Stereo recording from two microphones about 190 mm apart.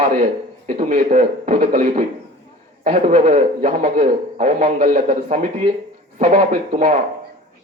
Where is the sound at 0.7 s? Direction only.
45° right (ahead or behind).